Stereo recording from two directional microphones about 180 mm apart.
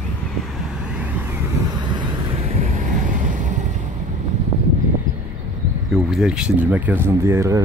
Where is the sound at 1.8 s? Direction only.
25° right (ahead or behind); by 3.6 s 45° right (ahead or behind).